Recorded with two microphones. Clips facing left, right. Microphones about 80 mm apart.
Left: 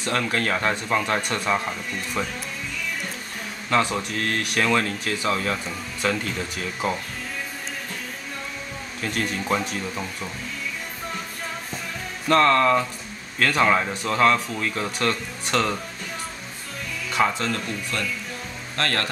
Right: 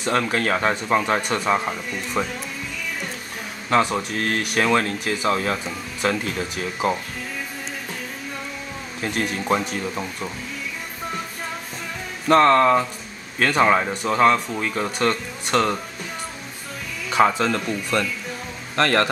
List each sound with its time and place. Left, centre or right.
0.0 s speech: centre
3.7 s speech: centre
9.0 s speech: centre
12.3 s speech: centre
17.3 s speech: centre
18.8 s speech: right